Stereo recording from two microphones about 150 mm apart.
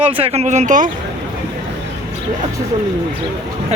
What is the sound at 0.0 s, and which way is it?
Speech, 40° right (ahead or behind).